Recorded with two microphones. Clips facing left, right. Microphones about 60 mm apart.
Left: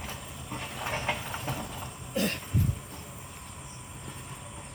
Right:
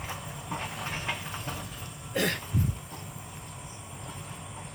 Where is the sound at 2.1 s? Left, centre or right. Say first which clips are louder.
Right 1 dB; right.